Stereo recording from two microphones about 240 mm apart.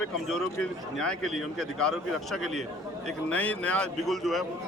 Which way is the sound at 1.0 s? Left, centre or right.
Centre.